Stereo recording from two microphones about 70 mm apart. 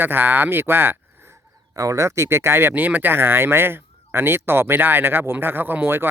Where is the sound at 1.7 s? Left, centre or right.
Right.